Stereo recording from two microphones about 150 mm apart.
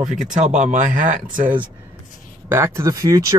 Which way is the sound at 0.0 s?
55° right (ahead or behind).